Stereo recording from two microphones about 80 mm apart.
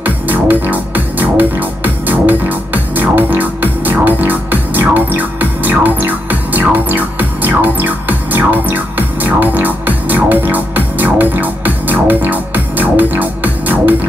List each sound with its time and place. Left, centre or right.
0.0 s music: right